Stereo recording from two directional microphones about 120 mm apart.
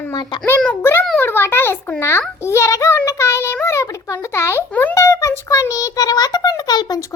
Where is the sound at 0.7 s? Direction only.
20° left (ahead or behind).